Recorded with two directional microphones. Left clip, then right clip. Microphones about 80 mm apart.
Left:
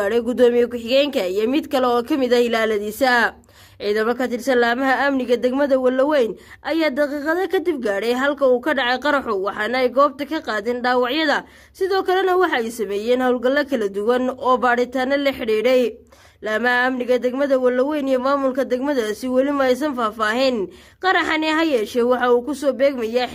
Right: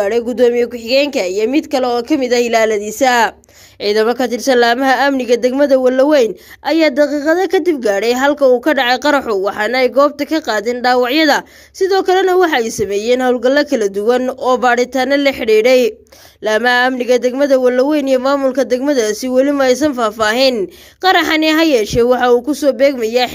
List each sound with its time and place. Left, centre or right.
0.0 s speech: centre
3.0 s speech: right
3.8 s speech: right
16.4 s a sound: right
17.0 s speech: right